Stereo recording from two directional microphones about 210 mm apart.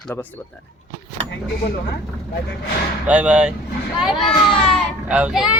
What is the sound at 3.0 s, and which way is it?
A child's voice, 5° right (ahead or behind).